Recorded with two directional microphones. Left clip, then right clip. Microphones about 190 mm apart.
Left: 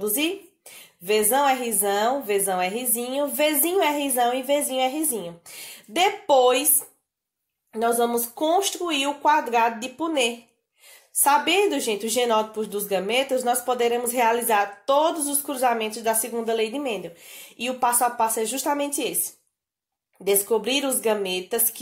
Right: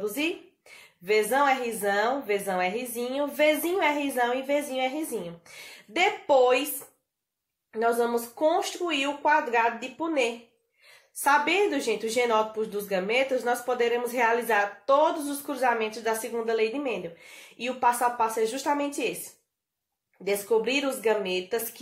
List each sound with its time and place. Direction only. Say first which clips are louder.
1.0 s a woman's voice: left 2 dB; 40° left (ahead or behind)
7.7 s a woman's voice: left 3 dB; 40° left (ahead or behind)
20.2 s a woman's voice: left 3 dB; 45° left (ahead or behind)